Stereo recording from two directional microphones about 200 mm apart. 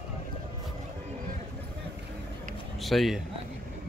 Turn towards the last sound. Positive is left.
turn(degrees=0)  # may be behind; listen again after turning